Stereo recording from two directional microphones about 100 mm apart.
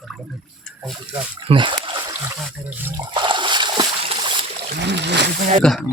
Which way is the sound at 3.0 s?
50° right (ahead or behind).